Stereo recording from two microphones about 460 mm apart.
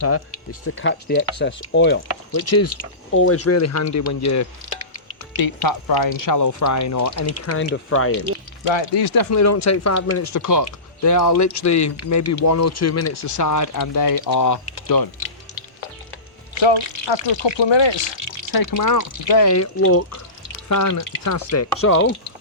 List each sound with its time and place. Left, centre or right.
0.6 s speech: left
5.5 s speech: left
8.7 s speech: left
9.3 s speech: left
16.6 s speech: left
18.5 s speech: left